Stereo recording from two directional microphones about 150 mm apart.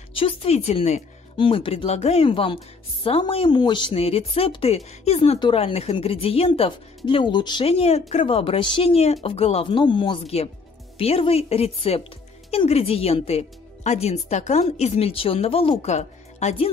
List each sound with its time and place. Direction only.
0.1 s speech: 40° left (ahead or behind)
1.3 s a woman's voice: 35° left (ahead or behind)